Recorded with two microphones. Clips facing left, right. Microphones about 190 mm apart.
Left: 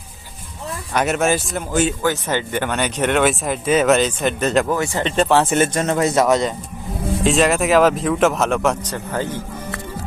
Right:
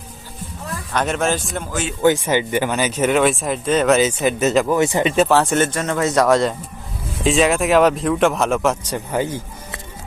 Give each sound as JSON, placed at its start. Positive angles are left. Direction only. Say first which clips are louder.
{"t": 0.9, "sound": "speech", "louder": "left 2 dB", "side_deg": 5}
{"t": 2.2, "sound": "speech", "louder": "right 3 dB", "side_deg": -10}
{"t": 4.8, "sound": "speech", "louder": "right 4 dB", "side_deg": -15}
{"t": 5.1, "sound": "speech", "louder": "left 2 dB", "side_deg": 0}
{"t": 5.7, "sound": "a man's voice", "louder": "left 2 dB", "side_deg": 25}
{"t": 6.1, "sound": "speech", "louder": "right 4 dB", "side_deg": 5}